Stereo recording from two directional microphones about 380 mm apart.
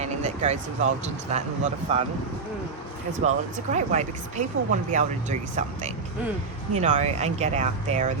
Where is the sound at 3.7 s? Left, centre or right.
Centre.